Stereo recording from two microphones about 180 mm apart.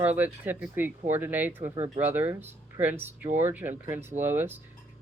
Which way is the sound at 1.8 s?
35° right (ahead or behind).